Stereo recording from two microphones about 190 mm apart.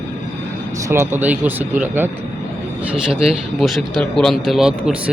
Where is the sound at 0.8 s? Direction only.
15° right (ahead or behind).